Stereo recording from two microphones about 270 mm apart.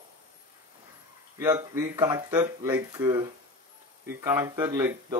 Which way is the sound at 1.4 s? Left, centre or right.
Centre.